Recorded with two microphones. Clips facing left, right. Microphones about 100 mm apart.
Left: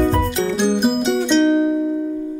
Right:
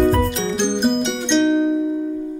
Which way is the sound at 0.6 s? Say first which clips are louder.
Left 1 dB; 5° left (ahead or behind).